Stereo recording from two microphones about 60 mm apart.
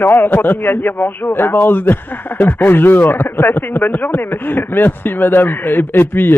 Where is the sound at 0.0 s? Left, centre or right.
Left.